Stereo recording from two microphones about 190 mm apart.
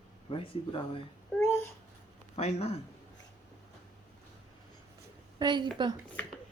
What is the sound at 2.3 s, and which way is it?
Speech, 35° left (ahead or behind).